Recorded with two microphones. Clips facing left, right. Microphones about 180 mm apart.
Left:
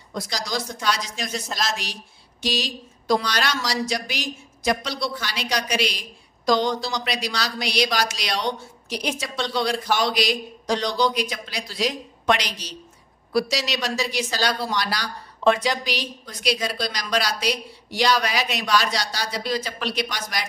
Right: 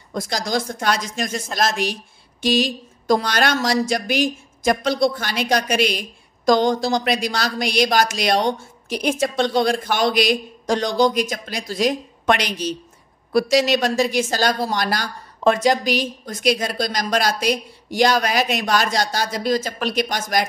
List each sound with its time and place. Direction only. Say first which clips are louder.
0.1 s speech: right 5 dB; 50° right (ahead or behind)